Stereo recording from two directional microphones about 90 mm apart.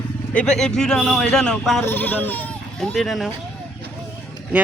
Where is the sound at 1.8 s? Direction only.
20° left (ahead or behind).